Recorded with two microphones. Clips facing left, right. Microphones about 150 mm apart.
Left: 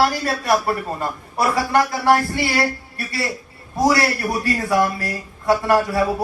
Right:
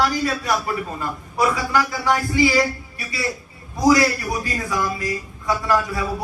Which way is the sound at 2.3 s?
60° left (ahead or behind).